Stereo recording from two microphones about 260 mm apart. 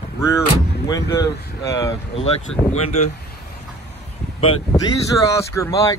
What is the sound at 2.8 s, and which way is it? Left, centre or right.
Speech, left.